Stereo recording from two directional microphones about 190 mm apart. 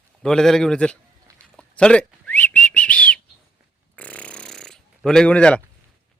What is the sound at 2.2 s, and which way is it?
Whistling, 10° left (ahead or behind).